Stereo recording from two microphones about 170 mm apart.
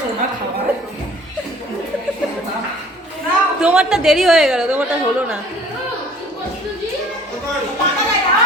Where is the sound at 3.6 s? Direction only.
5° right (ahead or behind).